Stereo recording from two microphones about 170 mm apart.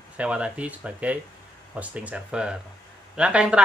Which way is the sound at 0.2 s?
5° right (ahead or behind).